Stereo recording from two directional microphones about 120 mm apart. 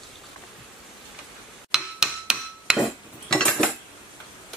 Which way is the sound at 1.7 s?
5° right (ahead or behind).